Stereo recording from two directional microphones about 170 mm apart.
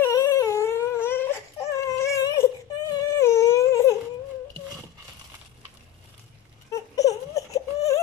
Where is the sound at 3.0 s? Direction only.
15° left (ahead or behind).